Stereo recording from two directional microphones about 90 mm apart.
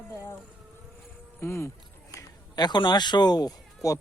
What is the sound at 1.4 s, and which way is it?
Speech, 30° left (ahead or behind).